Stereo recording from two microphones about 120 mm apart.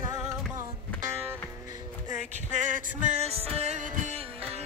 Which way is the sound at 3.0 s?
70° right (ahead or behind).